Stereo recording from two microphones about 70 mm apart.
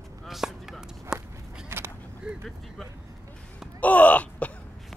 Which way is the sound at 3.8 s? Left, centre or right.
Left.